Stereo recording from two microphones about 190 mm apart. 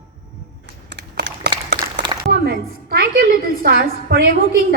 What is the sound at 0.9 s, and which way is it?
Computer keyboard, 65° right (ahead or behind).